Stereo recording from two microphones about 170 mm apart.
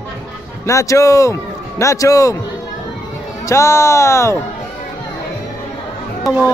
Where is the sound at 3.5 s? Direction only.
15° left (ahead or behind).